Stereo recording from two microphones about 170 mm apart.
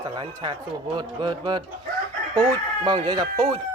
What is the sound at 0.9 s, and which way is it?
Speech, 25° right (ahead or behind).